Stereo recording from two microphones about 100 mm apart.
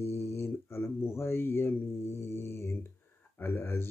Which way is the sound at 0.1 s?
25° left (ahead or behind).